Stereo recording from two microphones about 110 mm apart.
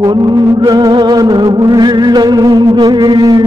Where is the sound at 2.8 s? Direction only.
35° right (ahead or behind).